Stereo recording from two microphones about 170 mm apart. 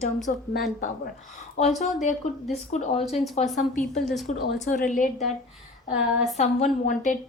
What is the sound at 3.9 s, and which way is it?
Speech, centre (ahead or behind).